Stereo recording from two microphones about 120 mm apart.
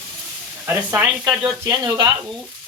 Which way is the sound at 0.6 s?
15° right (ahead or behind).